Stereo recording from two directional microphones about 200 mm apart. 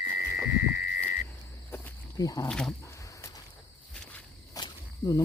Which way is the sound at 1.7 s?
15° left (ahead or behind).